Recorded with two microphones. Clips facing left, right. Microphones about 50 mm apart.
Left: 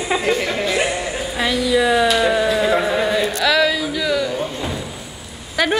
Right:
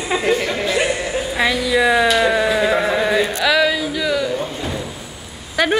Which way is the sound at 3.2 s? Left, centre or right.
Centre.